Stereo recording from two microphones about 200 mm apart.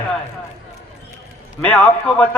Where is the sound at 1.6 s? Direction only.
5° left (ahead or behind).